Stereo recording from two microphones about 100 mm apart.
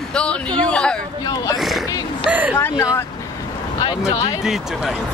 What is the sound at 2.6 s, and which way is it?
Speech, 25° left (ahead or behind).